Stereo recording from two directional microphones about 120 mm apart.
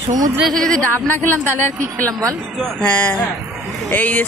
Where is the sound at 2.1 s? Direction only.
25° right (ahead or behind).